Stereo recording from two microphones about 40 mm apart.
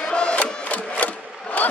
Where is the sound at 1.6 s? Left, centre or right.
Left.